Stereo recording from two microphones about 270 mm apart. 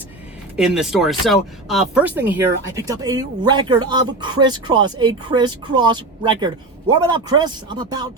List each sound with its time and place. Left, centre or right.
0.5 s speech: centre